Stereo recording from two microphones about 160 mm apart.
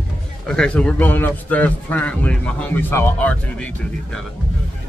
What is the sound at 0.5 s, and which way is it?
A man's voice, 5° left (ahead or behind).